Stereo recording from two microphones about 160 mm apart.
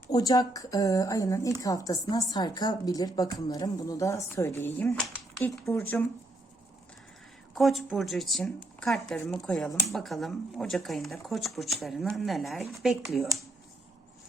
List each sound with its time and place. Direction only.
0.1 s a woman's voice: 25° left (ahead or behind)
7.5 s speech: centre (ahead or behind)